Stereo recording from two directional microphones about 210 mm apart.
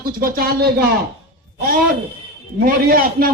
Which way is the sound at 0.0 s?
45° right (ahead or behind).